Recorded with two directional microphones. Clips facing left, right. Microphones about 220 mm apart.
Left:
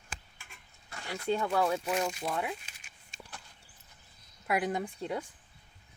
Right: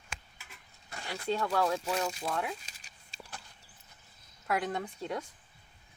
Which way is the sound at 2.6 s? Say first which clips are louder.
Even; 35° right (ahead or behind).